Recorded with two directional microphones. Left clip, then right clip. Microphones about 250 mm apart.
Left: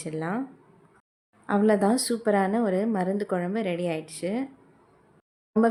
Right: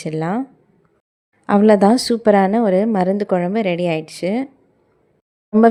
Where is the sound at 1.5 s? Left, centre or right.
Right.